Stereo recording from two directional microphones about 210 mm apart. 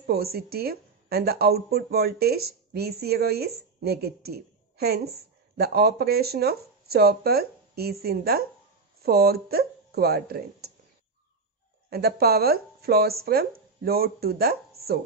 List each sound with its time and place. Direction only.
0.0 s a woman's voice: 50° right (ahead or behind)
11.9 s a woman's voice: 50° right (ahead or behind)